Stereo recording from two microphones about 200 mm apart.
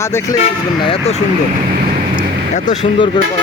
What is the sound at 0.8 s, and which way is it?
Speech, 30° left (ahead or behind).